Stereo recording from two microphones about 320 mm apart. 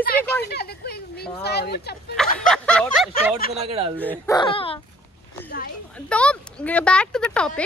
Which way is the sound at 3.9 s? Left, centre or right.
Centre.